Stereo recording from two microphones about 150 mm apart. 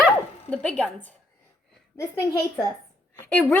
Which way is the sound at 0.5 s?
5° left (ahead or behind).